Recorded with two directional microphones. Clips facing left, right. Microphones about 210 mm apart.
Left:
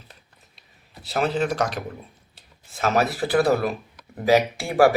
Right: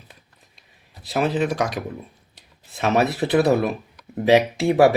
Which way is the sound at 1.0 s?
15° right (ahead or behind).